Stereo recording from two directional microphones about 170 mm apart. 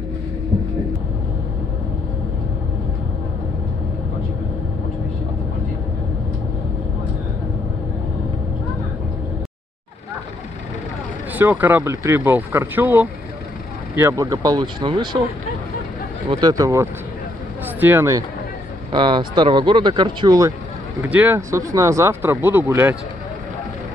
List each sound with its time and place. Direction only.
11.3 s speech: 10° right (ahead or behind); by 15.2 s 30° right (ahead or behind)
16.3 s speech: 25° right (ahead or behind)
18.9 s speech: 30° right (ahead or behind)
21.0 s speech: 10° right (ahead or behind)